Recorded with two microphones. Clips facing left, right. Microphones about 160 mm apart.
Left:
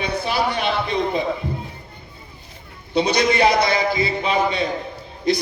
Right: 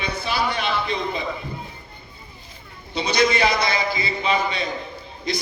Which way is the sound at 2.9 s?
60° left (ahead or behind).